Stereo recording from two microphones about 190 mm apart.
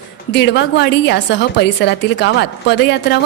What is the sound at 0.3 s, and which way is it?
A woman's voice, 70° left (ahead or behind).